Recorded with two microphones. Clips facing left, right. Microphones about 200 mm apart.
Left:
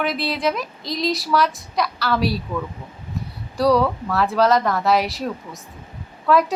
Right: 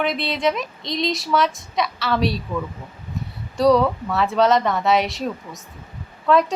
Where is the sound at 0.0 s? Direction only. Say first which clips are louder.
Right 1 dB; centre (ahead or behind).